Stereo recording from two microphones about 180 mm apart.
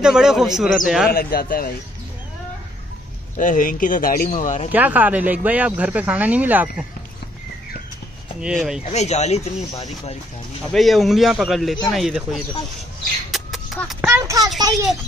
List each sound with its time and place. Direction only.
0.0 s a man's voice: 5° right (ahead or behind)
1.1 s speech: 55° left (ahead or behind)
3.3 s speech: 45° left (ahead or behind)
4.7 s speech: 10° right (ahead or behind)
8.4 s a man's voice: 5° right (ahead or behind)
8.8 s speech: 35° left (ahead or behind)
10.7 s a man's voice: centre (ahead or behind)
13.3 s a sound: centre (ahead or behind)
14.0 s speech: 15° right (ahead or behind)